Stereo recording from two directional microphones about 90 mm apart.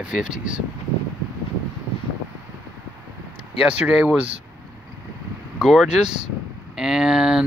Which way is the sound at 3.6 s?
10° right (ahead or behind).